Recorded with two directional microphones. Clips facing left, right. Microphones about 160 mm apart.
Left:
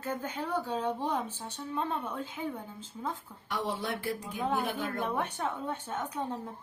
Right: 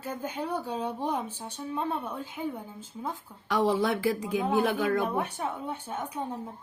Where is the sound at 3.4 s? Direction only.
90° right.